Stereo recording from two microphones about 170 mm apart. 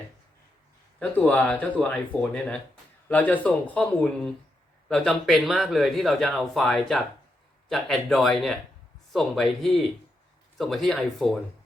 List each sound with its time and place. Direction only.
0.9 s speech: 10° left (ahead or behind)